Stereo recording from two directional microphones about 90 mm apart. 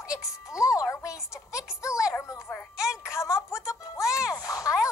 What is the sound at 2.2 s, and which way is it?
Music, 30° left (ahead or behind).